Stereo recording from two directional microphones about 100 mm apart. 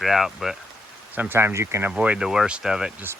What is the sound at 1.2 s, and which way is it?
Speech, 25° right (ahead or behind).